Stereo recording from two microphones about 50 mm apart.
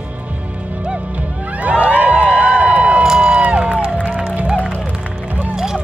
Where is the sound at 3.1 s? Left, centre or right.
Centre.